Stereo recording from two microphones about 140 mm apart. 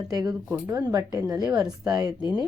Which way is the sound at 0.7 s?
25° right (ahead or behind).